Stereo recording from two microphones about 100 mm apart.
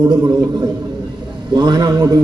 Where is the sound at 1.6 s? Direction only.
45° right (ahead or behind).